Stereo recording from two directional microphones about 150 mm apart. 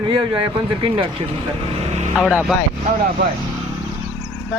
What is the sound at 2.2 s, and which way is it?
Speech, 5° right (ahead or behind).